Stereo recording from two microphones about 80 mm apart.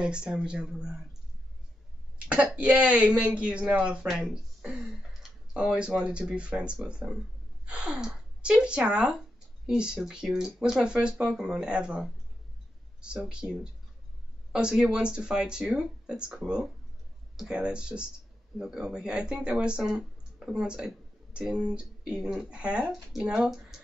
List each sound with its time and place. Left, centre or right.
0.0 s speech: centre
2.1 s speech: centre
13.2 s speech: centre